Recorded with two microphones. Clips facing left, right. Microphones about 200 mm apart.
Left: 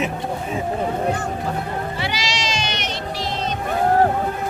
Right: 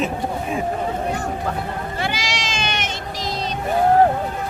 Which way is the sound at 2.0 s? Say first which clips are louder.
Even; 50° right (ahead or behind).